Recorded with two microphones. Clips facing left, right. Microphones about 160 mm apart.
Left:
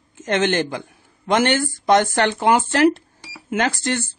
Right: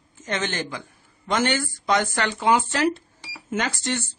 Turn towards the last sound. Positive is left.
turn(degrees=60)  # may be behind; listen again after turning